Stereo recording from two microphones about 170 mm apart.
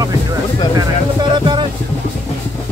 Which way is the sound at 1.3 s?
25° right (ahead or behind).